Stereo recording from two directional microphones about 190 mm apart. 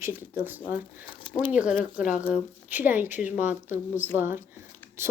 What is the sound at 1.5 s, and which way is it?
Speech, 5° right (ahead or behind).